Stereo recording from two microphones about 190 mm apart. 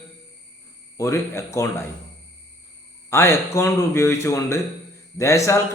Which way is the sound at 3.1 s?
15° left (ahead or behind).